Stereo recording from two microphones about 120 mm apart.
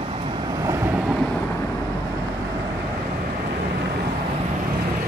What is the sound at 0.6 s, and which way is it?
Vehicle, 25° right (ahead or behind).